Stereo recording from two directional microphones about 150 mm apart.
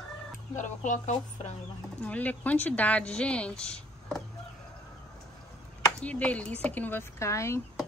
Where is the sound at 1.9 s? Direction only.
10° left (ahead or behind).